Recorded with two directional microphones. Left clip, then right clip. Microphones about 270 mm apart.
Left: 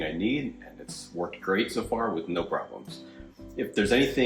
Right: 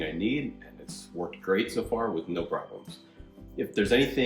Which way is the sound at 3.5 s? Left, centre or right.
Centre.